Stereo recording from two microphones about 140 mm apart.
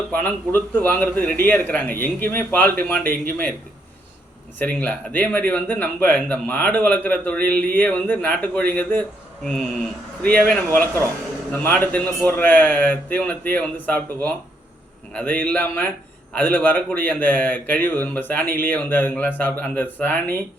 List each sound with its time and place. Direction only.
0.1 s speech: 10° left (ahead or behind)
4.5 s speech: 10° left (ahead or behind)